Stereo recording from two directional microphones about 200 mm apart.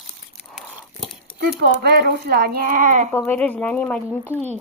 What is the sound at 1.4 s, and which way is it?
Speech, 55° right (ahead or behind).